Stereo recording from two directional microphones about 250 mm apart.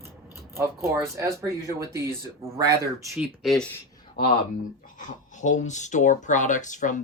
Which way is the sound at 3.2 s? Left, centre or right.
Centre.